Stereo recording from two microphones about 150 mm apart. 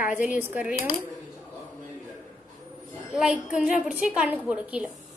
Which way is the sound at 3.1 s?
5° right (ahead or behind).